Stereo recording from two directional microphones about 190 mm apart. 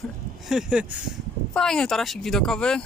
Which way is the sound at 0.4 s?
5° right (ahead or behind).